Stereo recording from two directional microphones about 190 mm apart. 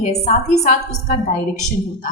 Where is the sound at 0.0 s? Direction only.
35° left (ahead or behind).